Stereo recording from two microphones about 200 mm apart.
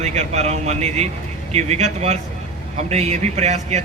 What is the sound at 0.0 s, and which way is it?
Speech, 35° right (ahead or behind).